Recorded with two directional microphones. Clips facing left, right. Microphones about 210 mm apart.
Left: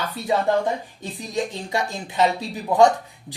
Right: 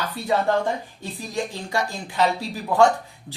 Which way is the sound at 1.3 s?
20° left (ahead or behind).